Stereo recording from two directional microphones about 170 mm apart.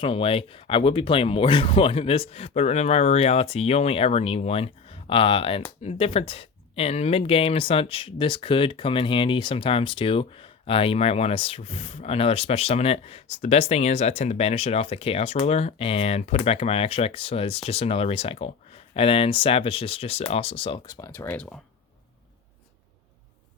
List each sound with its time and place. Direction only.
0.0 s speech: 35° left (ahead or behind); by 21.6 s 5° left (ahead or behind)